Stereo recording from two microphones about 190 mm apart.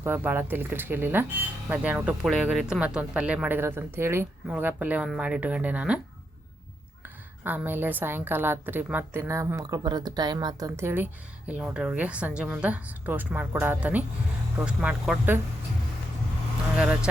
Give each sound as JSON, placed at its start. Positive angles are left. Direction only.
{"t": 0.0, "sound": "a woman's voice", "side_deg": -10}
{"t": 7.0, "sound": "a woman's voice", "side_deg": -10}
{"t": 16.7, "sound": "speech", "side_deg": -5}